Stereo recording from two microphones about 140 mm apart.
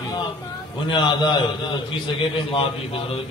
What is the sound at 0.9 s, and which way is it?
A man's voice, 30° left (ahead or behind).